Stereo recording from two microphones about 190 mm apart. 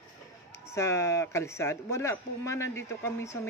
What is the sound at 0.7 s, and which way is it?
Speech, 15° left (ahead or behind).